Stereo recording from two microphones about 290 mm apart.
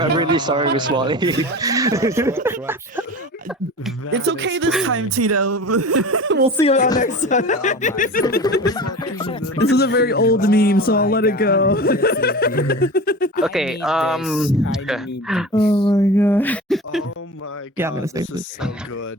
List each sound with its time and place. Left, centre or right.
0.0 s speech: centre
4.3 s speech: right
4.9 s speech: right
6.6 s speech: left
8.6 s speech: centre
9.6 s speech: left
13.4 s speech: centre
15.7 s speech: centre
16.1 s speech: centre
17.7 s speech: centre